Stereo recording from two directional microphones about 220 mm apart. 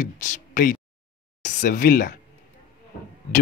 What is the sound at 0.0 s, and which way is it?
Speech, 40° left (ahead or behind).